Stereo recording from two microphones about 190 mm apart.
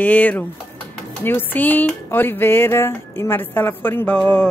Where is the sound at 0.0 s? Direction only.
10° left (ahead or behind).